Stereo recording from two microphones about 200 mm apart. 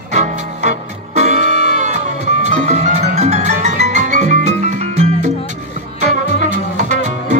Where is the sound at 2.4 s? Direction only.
35° right (ahead or behind).